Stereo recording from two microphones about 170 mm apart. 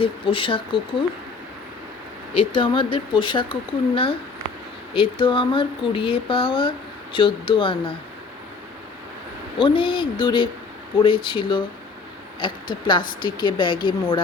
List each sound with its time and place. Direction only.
0.0 s speech: 30° left (ahead or behind)
2.3 s speech: 30° left (ahead or behind)
9.6 s speech: 30° left (ahead or behind)